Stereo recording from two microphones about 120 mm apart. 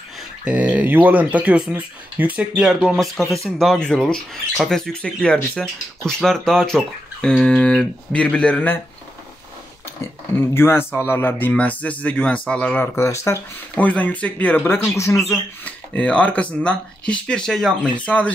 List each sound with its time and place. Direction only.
0.5 s speech: 10° right (ahead or behind); by 8.8 s 15° left (ahead or behind)
10.5 s speech: 20° left (ahead or behind)
13.7 s speech: 15° left (ahead or behind)
15.0 s speech: 25° left (ahead or behind)
15.6 s speech: 10° left (ahead or behind)